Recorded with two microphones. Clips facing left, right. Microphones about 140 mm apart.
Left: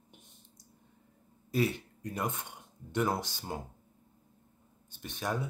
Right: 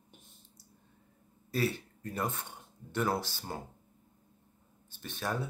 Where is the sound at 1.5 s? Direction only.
15° left (ahead or behind).